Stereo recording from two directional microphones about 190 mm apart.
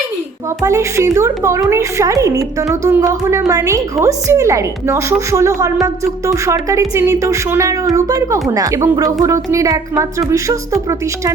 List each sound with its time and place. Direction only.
0.6 s a woman's voice: 15° right (ahead or behind)